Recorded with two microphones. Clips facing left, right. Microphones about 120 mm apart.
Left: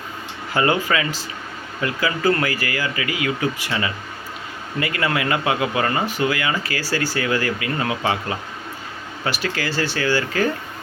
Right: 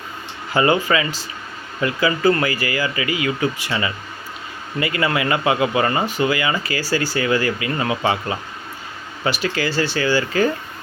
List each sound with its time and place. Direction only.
0.5 s speech: 5° right (ahead or behind)